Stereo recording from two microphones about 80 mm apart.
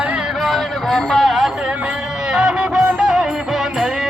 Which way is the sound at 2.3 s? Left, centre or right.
Centre.